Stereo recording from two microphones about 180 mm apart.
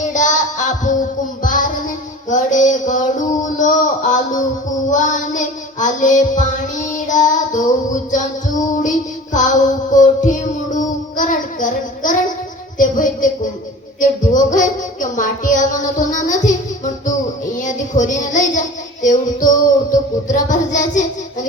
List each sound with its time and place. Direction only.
0.0 s child singing: 45° left (ahead or behind)
2.3 s music: 45° left (ahead or behind)
3.6 s a sound: 45° left (ahead or behind)
4.9 s child singing: 45° left (ahead or behind)
9.3 s music: 45° left (ahead or behind)
12.8 s a sound: 45° left (ahead or behind)
14.0 s music: 45° left (ahead or behind)
17.6 s child singing: 45° left (ahead or behind)
19.0 s music: 45° left (ahead or behind)